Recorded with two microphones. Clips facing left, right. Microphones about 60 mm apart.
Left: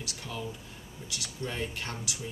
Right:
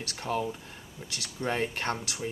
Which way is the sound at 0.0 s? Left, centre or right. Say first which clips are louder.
Right 7 dB; right.